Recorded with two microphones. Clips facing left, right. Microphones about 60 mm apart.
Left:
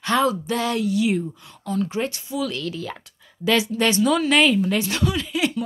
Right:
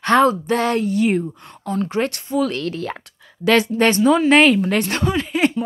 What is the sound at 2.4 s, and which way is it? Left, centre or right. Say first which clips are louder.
A woman's voice: right 5 dB; right.